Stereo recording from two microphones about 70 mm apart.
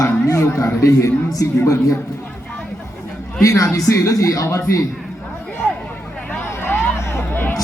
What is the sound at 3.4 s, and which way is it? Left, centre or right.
Speech, left.